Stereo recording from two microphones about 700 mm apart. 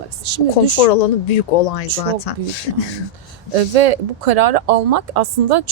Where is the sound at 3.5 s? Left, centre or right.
Right.